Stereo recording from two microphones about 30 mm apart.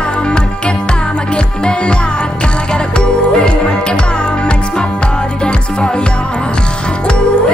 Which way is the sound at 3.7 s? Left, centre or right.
Left.